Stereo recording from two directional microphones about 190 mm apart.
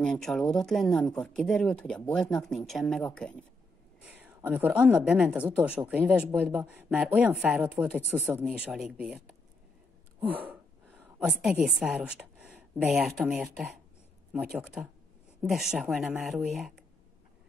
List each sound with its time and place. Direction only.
0.0 s speech: 5° left (ahead or behind)
4.0 s a woman's voice: 10° right (ahead or behind)
10.4 s a woman's voice: 10° right (ahead or behind)